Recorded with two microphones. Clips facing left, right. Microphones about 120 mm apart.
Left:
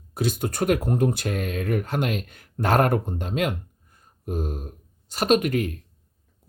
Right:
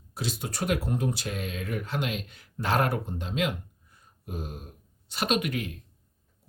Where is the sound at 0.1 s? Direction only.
50° left (ahead or behind).